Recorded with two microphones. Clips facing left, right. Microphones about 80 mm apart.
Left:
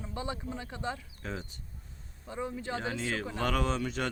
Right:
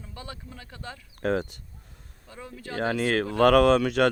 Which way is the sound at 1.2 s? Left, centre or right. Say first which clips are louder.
Right 13 dB; right.